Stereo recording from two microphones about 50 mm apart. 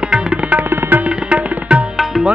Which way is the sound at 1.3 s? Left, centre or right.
Right.